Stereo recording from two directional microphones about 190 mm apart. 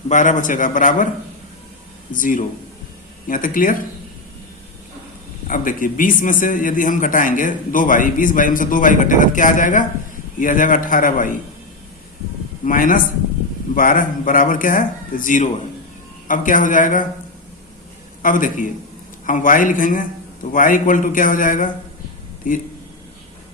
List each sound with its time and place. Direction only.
0.1 s a man's voice: 40° left (ahead or behind)
2.1 s a man's voice: 45° left (ahead or behind)
5.5 s a man's voice: 45° left (ahead or behind)
12.6 s a man's voice: 45° left (ahead or behind)
18.2 s a man's voice: 45° left (ahead or behind)